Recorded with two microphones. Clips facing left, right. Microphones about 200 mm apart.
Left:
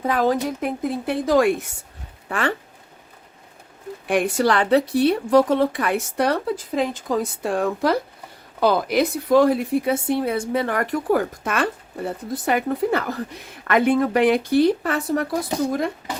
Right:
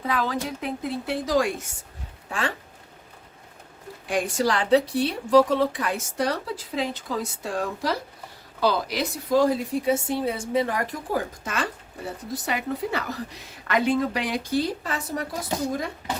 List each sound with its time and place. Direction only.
0.0 s a woman's voice: 45° left (ahead or behind)
4.0 s a woman's voice: 60° left (ahead or behind)